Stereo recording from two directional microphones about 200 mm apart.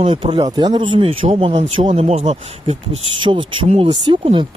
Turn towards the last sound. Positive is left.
turn(degrees=-25)  # may be behind; listen again after turning